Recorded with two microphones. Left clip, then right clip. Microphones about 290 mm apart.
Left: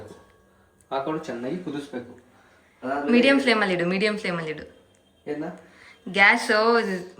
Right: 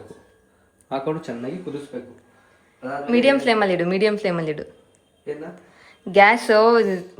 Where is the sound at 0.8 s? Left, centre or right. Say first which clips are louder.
Right 2 dB; right.